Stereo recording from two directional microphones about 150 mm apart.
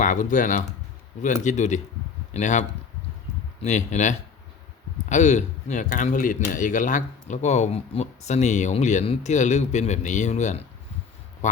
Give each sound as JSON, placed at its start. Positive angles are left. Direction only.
{"t": 0.0, "sound": "speech", "side_deg": 60}